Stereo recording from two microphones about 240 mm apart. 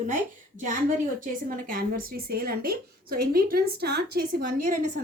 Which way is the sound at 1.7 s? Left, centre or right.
Right.